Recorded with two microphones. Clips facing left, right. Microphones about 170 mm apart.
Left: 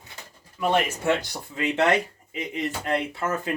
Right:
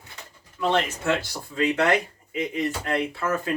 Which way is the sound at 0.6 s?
15° left (ahead or behind).